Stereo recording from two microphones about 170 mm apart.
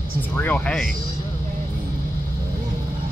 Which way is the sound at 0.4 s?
5° left (ahead or behind).